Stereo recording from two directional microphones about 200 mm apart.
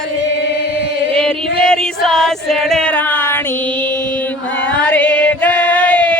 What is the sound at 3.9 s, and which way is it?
Chant, 10° left (ahead or behind).